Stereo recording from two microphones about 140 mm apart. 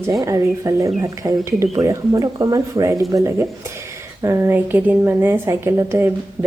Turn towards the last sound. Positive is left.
turn(degrees=-20)  # may be behind; listen again after turning